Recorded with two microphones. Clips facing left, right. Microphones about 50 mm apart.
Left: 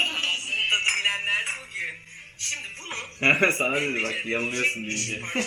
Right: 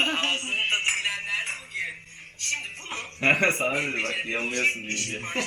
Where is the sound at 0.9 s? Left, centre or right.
Left.